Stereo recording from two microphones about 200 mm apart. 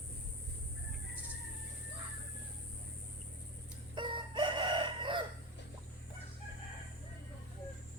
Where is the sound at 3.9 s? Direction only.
25° right (ahead or behind).